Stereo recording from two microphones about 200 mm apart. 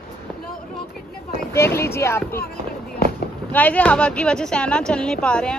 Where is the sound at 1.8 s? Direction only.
15° left (ahead or behind).